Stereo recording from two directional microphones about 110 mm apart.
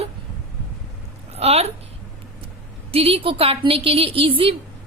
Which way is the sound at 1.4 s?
70° right (ahead or behind).